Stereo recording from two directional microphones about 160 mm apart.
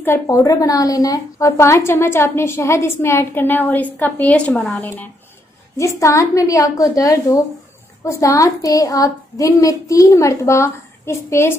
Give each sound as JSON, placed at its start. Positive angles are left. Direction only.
{"t": 0.0, "sound": "a woman's voice", "side_deg": 15}
{"t": 5.8, "sound": "a woman's voice", "side_deg": 20}